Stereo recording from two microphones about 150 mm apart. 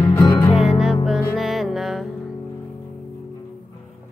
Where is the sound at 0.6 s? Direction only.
5° right (ahead or behind).